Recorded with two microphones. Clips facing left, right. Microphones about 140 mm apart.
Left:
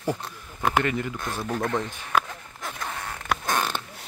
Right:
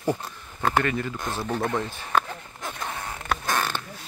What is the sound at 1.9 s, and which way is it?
Speech, 15° left (ahead or behind).